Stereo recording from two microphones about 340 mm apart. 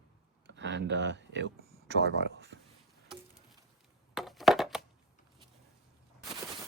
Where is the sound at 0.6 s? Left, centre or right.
Right.